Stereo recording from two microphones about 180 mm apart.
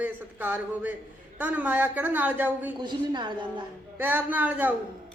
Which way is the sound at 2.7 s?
25° right (ahead or behind).